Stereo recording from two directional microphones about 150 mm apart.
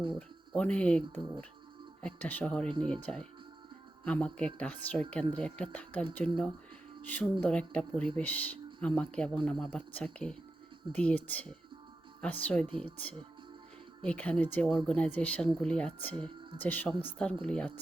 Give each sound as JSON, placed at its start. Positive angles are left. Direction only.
{"t": 0.2, "sound": "speech", "side_deg": 10}
{"t": 2.6, "sound": "speech", "side_deg": -30}
{"t": 2.9, "sound": "speech", "side_deg": 5}